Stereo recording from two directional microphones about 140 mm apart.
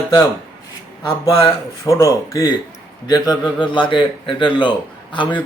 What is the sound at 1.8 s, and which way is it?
A man's voice, 20° left (ahead or behind).